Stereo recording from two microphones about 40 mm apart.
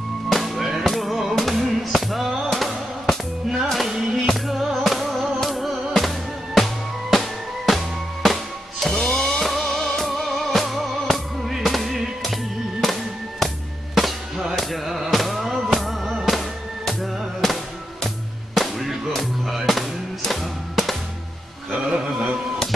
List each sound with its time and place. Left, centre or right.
0.3 s music: centre
3.9 s music: centre
21.6 s music: centre